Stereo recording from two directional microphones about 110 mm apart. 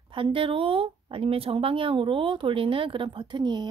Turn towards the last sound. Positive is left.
turn(degrees=-40)  # may be behind; listen again after turning